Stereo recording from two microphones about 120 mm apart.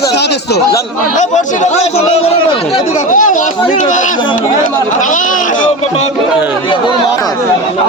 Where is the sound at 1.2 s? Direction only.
85° left; by 2.3 s 55° left (ahead or behind).